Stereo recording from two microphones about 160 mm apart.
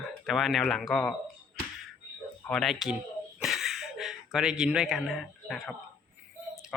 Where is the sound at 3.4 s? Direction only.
Centre (ahead or behind).